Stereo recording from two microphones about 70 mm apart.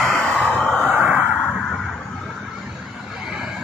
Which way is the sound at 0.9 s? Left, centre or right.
Right.